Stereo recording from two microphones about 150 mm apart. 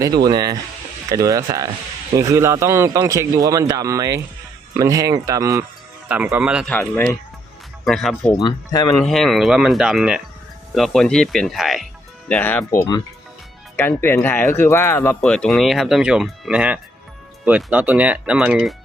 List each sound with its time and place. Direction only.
0.3 s a man's voice: 25° right (ahead or behind); by 6.7 s 10° right (ahead or behind)
6.7 s speech: 15° left (ahead or behind)
7.9 s speech: centre (ahead or behind)
8.4 s speech: 25° left (ahead or behind)
9.0 s speech: centre (ahead or behind)
12.3 s speech: 10° left (ahead or behind)
15.2 s speech: 5° left (ahead or behind)